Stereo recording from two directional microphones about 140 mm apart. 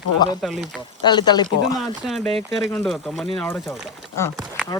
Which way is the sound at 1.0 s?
30° left (ahead or behind).